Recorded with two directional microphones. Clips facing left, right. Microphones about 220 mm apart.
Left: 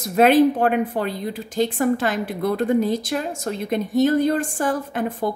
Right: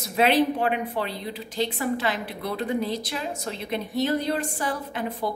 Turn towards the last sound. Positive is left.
turn(degrees=50)  # may be behind; listen again after turning